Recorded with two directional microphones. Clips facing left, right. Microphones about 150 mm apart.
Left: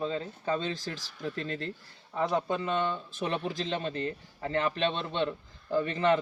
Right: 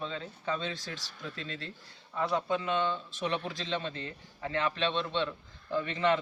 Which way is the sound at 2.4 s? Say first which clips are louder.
Left 1 dB; 45° left (ahead or behind).